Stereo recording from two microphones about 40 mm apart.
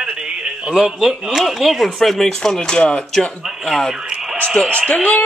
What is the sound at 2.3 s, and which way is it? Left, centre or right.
Speech, centre.